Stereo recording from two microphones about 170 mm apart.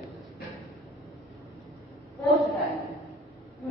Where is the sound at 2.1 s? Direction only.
Centre (ahead or behind).